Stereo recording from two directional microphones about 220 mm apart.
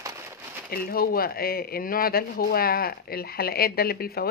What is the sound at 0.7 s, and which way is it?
Speech, 40° left (ahead or behind).